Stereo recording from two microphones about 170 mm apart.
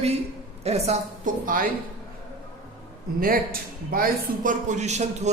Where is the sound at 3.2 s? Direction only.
60° right (ahead or behind).